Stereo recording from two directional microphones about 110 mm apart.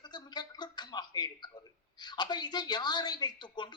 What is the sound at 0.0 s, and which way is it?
A man's voice, 40° left (ahead or behind).